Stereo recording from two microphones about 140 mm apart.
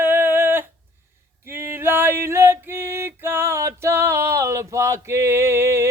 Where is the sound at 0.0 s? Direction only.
15° right (ahead or behind).